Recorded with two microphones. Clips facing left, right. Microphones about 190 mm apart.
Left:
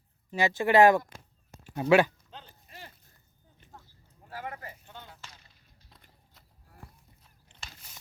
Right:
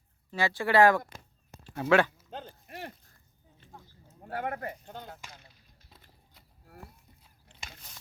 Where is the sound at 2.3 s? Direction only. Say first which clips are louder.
Right 7 dB; 50° right (ahead or behind); by 3.0 s 65° right (ahead or behind).